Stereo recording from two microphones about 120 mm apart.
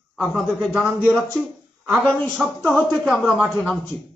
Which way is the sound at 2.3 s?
Centre (ahead or behind).